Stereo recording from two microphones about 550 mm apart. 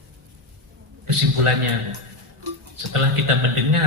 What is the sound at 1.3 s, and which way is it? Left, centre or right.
Speech, right.